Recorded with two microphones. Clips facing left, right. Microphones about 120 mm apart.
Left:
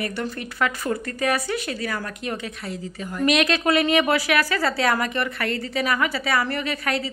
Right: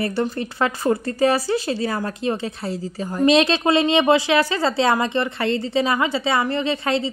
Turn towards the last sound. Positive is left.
turn(degrees=-25)  # may be behind; listen again after turning